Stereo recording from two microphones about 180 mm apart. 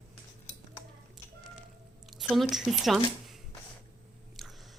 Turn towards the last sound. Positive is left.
turn(degrees=0)  # may be behind; listen again after turning